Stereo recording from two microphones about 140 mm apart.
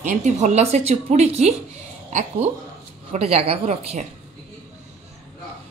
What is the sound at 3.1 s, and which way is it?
A woman's voice, 45° right (ahead or behind).